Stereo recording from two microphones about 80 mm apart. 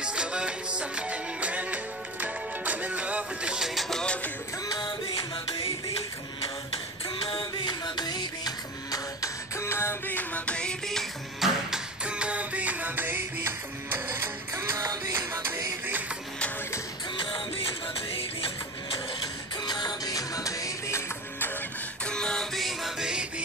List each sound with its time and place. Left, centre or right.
0.0 s music: centre
3.9 s music: centre
4.6 s music: left
7.2 s music: left
9.6 s a sound: left
10.1 s music: centre
11.7 s music: centre
14.1 s music: right
15.1 s music: right
17.2 s music: left
19.6 s music: left
22.0 s music: centre